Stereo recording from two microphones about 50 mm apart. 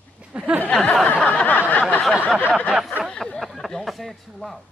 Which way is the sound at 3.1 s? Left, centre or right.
Centre.